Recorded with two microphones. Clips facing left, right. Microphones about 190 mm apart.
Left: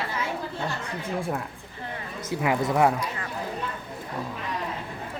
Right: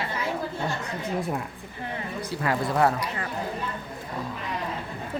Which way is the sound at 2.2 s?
20° left (ahead or behind).